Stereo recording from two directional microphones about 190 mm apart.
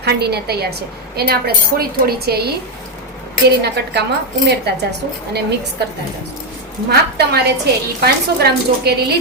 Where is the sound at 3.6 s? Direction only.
60° right (ahead or behind).